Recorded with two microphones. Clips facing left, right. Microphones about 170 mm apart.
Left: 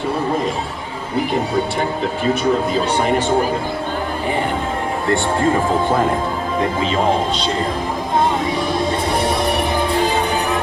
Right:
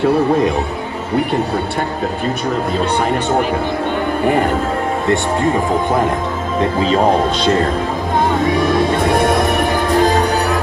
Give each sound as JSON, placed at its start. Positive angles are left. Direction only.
{"t": 5.0, "sound": "speech", "side_deg": -20}
{"t": 8.7, "sound": "music", "side_deg": -60}